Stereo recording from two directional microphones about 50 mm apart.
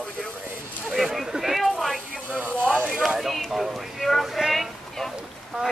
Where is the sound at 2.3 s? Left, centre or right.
Right.